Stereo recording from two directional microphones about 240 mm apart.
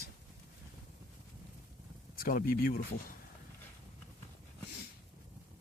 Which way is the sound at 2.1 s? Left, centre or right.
Left.